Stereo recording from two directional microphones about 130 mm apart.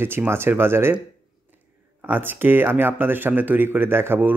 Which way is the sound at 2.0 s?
15° right (ahead or behind).